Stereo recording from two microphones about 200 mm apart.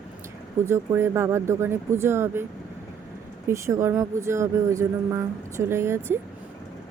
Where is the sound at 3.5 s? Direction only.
15° right (ahead or behind).